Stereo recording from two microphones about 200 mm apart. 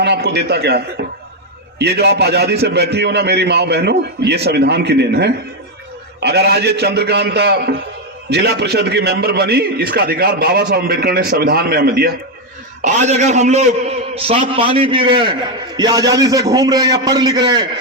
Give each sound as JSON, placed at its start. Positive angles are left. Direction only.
{"t": 0.0, "sound": "a man's voice", "side_deg": -55}
{"t": 1.8, "sound": "a man's voice", "side_deg": -55}
{"t": 12.8, "sound": "a man's voice", "side_deg": -35}